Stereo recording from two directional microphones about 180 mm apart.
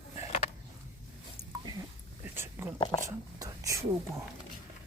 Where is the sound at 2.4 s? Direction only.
15° right (ahead or behind).